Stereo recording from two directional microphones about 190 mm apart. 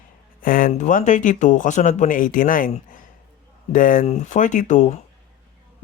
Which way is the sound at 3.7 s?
45° left (ahead or behind).